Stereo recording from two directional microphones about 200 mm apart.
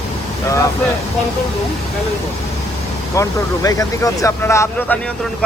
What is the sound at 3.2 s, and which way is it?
Speech, 15° left (ahead or behind).